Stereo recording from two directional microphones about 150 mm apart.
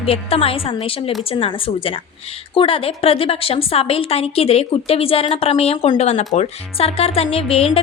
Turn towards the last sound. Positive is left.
turn(degrees=40)  # may be behind; listen again after turning